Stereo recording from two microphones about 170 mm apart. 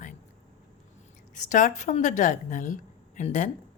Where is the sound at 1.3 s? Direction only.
45° left (ahead or behind).